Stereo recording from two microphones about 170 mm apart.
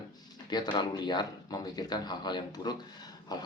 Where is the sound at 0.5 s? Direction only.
25° left (ahead or behind).